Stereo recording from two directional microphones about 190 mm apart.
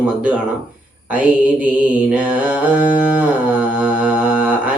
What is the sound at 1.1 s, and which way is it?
Mantra, 10° right (ahead or behind).